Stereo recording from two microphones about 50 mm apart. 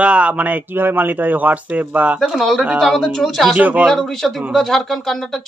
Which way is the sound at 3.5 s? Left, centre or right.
Right.